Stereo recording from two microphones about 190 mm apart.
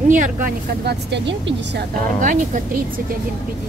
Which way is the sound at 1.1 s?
70° right (ahead or behind).